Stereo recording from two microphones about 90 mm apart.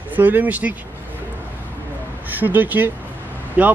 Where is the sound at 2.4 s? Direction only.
20° right (ahead or behind).